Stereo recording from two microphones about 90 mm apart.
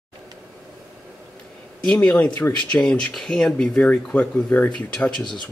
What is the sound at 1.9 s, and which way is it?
Speech, 10° left (ahead or behind).